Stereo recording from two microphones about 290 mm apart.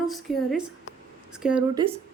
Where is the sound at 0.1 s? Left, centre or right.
Centre.